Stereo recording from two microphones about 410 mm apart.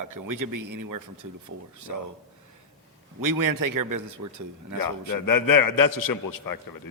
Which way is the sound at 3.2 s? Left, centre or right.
Right.